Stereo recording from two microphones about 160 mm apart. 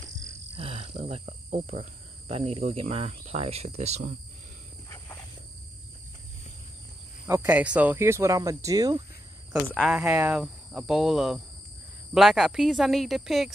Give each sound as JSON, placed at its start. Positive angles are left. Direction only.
{"t": 0.6, "sound": "cricket", "side_deg": -35}
{"t": 1.2, "sound": "speech", "side_deg": -50}
{"t": 4.8, "sound": "wild animals", "side_deg": 15}
{"t": 7.2, "sound": "speech", "side_deg": -15}
{"t": 10.0, "sound": "speech", "side_deg": -20}
{"t": 10.3, "sound": "speech", "side_deg": -5}